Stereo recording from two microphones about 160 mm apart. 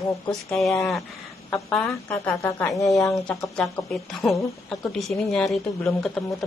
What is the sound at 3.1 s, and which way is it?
A woman's voice, 5° left (ahead or behind).